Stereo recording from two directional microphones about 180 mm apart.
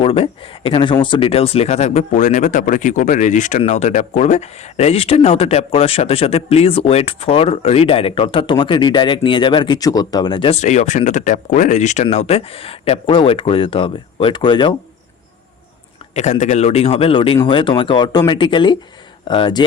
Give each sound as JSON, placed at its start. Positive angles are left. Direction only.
{"t": 0.0, "sound": "speech", "side_deg": 30}
{"t": 16.1, "sound": "speech", "side_deg": 40}